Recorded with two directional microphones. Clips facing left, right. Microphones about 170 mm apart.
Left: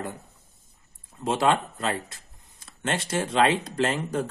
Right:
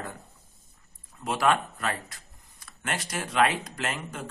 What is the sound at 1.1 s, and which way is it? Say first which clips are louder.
Speech: left 2 dB; 25° left (ahead or behind).